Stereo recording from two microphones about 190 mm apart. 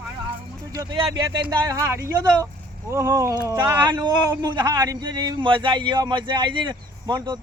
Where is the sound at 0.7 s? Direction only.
20° right (ahead or behind).